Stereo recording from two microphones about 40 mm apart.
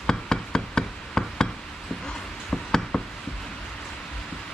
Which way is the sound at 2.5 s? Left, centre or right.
Centre.